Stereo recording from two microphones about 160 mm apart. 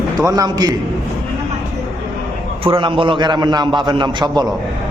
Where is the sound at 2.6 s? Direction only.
30° right (ahead or behind).